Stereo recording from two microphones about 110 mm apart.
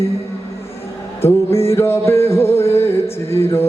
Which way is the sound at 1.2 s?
25° left (ahead or behind).